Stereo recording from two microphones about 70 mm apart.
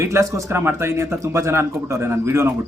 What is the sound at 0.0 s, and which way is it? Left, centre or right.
Speech, right.